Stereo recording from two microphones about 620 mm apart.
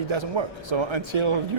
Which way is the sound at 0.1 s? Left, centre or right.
Right.